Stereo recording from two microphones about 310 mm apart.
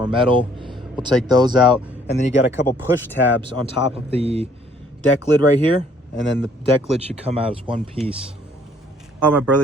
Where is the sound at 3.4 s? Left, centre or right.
Centre.